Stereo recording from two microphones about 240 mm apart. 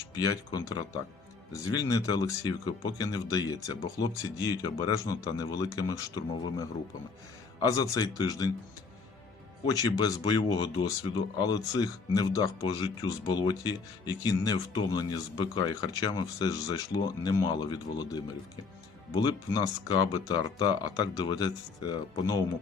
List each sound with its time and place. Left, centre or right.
0.1 s speech: centre
9.6 s speech: centre